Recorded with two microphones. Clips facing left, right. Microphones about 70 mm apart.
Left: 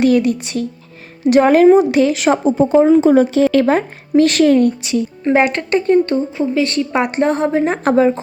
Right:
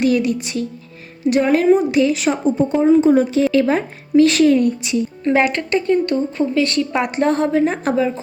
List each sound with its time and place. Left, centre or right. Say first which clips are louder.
0.2 s speech: left 3 dB; left
1.2 s speech: left 6 dB; left
5.2 s speech: left 2 dB; left
5.5 s speech: left 3 dB; left
6.3 s a woman's voice: left 1 dB; centre
7.7 s speech: left 5 dB; left